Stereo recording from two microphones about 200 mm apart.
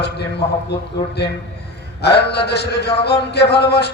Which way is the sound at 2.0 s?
55° left (ahead or behind).